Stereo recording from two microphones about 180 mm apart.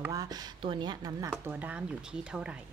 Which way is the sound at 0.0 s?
20° right (ahead or behind).